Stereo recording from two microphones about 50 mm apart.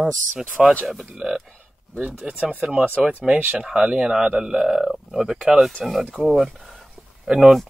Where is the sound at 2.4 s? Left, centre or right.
Right; by 6.2 s centre.